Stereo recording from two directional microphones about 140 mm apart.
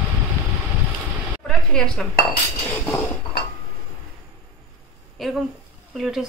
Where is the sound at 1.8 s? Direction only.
5° left (ahead or behind).